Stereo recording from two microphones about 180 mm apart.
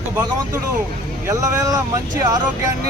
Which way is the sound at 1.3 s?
20° right (ahead or behind).